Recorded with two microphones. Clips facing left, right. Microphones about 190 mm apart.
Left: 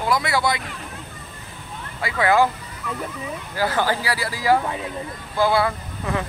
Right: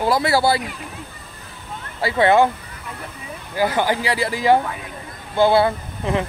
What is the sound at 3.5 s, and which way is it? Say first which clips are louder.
Speech: right 3 dB; 15° right (ahead or behind).